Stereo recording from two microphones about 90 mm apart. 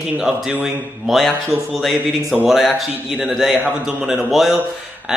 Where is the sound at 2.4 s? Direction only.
5° right (ahead or behind).